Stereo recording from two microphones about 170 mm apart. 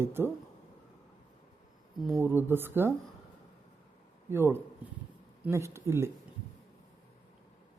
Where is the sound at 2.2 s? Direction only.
15° right (ahead or behind).